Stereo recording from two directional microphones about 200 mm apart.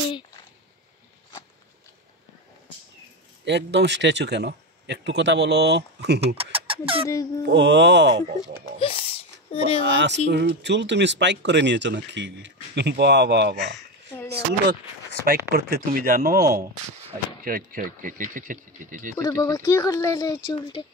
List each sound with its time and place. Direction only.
3.4 s speech: 60° right (ahead or behind)
6.2 s speech: 30° right (ahead or behind)
7.1 s speech: 15° left (ahead or behind)
7.4 s speech: 60° right (ahead or behind)
8.3 s speech: 35° right (ahead or behind)
8.7 s a sound: 30° left (ahead or behind)
9.8 s speech: 60° right (ahead or behind)
13.7 s a sound: 10° left (ahead or behind)
15.2 s speech: 50° right (ahead or behind)
19.2 s speech: 15° left (ahead or behind)